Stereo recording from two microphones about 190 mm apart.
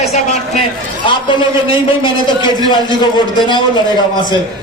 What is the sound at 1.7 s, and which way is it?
A man's voice, 25° left (ahead or behind).